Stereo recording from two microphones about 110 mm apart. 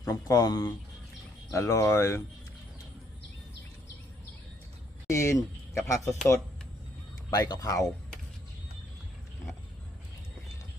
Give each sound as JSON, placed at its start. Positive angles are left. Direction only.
{"t": 0.0, "sound": "speech", "side_deg": 30}
{"t": 5.0, "sound": "speech", "side_deg": 25}
{"t": 7.3, "sound": "speech", "side_deg": 35}